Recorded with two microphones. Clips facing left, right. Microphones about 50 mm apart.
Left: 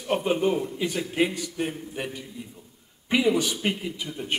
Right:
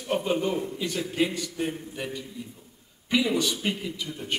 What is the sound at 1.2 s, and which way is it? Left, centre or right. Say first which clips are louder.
A man's voice: even; centre.